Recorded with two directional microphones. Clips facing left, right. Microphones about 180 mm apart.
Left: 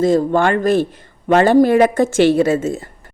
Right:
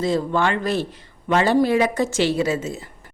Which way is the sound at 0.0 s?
50° left (ahead or behind).